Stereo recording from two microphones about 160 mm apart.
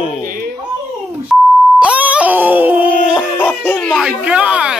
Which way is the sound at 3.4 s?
10° left (ahead or behind).